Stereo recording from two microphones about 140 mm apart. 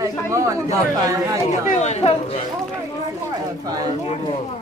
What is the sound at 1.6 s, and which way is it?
Speech, 55° left (ahead or behind).